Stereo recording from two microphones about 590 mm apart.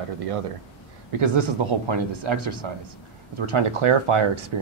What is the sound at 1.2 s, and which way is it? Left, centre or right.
Speech, right.